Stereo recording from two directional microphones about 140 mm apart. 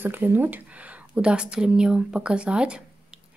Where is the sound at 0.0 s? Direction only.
15° right (ahead or behind).